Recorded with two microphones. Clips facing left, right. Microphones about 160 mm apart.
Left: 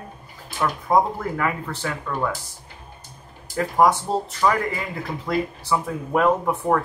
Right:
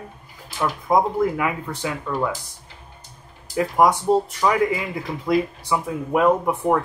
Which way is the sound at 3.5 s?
10° right (ahead or behind).